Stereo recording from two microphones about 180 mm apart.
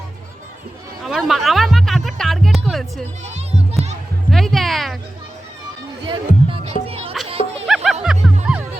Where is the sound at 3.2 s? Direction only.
35° right (ahead or behind).